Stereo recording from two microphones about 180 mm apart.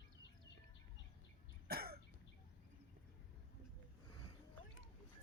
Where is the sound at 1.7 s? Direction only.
60° right (ahead or behind).